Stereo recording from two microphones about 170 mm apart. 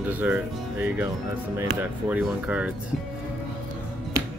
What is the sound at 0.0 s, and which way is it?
Speech, 10° right (ahead or behind).